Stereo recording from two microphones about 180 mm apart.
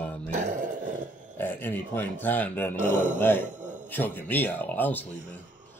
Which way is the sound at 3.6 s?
45° right (ahead or behind).